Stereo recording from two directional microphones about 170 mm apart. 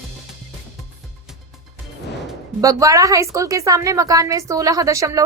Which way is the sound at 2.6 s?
20° right (ahead or behind).